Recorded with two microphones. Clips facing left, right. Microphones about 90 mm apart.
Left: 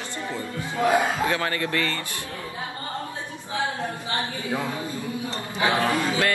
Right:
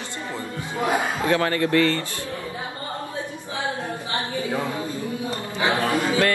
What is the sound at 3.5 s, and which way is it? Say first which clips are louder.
A man's voice: left 1 dB; 20° right (ahead or behind).